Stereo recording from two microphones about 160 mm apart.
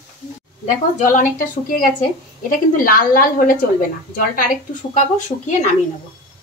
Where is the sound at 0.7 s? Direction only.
55° left (ahead or behind).